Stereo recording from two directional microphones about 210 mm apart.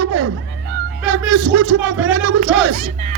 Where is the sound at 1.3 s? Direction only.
80° right.